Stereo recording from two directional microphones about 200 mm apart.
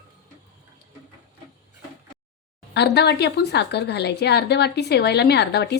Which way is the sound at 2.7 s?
55° left (ahead or behind).